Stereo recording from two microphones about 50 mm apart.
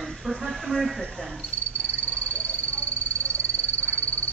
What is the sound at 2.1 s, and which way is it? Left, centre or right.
Frog, left.